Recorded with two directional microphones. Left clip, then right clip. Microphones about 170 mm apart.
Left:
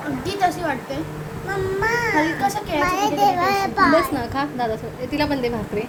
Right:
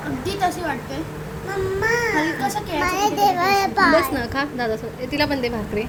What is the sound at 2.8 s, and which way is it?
A child's voice, 35° right (ahead or behind).